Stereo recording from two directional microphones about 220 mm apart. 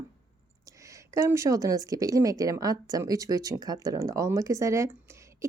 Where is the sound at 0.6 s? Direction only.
15° right (ahead or behind).